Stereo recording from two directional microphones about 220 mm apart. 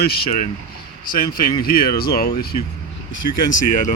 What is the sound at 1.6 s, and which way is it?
Speech, 45° left (ahead or behind).